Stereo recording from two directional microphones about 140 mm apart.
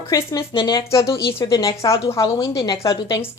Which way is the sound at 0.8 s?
20° left (ahead or behind).